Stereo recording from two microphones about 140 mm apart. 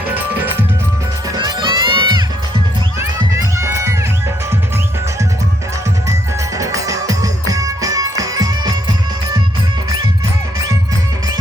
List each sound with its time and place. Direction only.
1.4 s music: 35° right (ahead or behind)
3.0 s music: 20° right (ahead or behind)
6.6 s music: 25° right (ahead or behind)